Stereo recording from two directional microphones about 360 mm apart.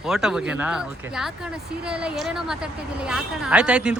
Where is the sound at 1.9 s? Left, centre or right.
Centre.